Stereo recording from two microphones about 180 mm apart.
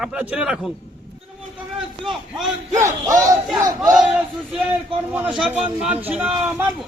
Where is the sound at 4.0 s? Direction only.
5° right (ahead or behind).